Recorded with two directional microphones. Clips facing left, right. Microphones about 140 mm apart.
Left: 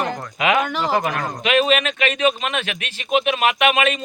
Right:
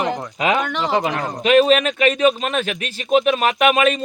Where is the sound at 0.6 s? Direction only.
5° left (ahead or behind).